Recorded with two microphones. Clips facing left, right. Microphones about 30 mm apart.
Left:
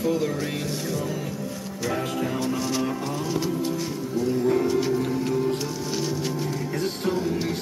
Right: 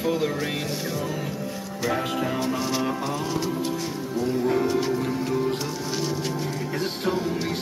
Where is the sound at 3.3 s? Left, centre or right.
Centre.